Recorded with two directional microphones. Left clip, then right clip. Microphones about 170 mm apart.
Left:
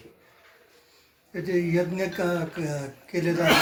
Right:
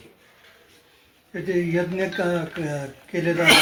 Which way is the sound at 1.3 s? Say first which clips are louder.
Right 2 dB; 30° right (ahead or behind).